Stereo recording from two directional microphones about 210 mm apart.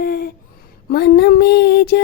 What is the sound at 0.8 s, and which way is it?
Speech, 50° left (ahead or behind).